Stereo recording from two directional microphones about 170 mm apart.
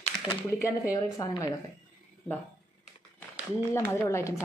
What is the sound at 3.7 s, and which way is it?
Speech, 15° left (ahead or behind).